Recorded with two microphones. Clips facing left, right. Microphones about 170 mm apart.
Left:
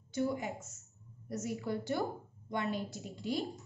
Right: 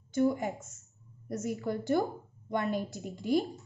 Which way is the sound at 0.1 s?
50° right (ahead or behind).